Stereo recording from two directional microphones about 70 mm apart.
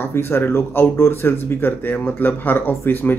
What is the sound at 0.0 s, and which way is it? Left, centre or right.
Speech, left.